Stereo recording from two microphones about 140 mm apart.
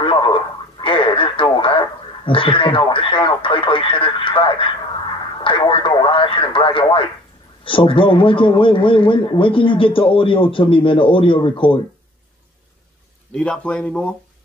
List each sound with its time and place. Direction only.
0.0 s a man's voice: 40° left (ahead or behind)
13.3 s speech: 5° left (ahead or behind)